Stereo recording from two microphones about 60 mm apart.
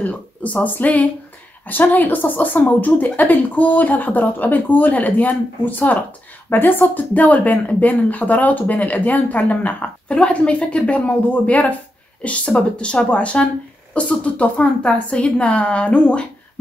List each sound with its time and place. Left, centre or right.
0.0 s speech: left